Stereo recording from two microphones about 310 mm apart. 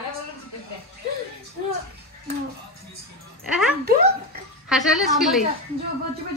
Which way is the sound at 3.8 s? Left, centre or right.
Right.